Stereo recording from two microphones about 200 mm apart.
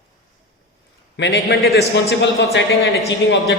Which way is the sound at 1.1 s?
60° left (ahead or behind).